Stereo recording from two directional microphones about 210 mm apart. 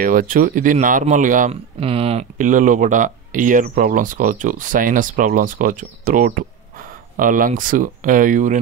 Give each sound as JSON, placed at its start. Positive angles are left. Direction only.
{"t": 0.0, "sound": "speech", "side_deg": -40}